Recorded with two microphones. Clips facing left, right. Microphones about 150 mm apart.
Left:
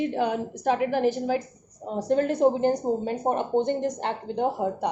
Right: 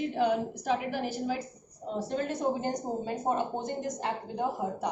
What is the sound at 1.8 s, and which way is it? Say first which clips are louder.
A woman's voice: left 8 dB; 55° left (ahead or behind).